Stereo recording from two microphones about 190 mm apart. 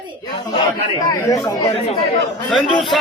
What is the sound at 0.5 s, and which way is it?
Speech, 25° left (ahead or behind).